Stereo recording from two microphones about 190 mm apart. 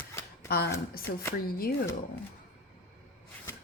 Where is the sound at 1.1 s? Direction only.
65° left (ahead or behind).